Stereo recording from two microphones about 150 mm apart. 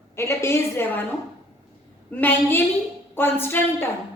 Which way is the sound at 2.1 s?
10° left (ahead or behind).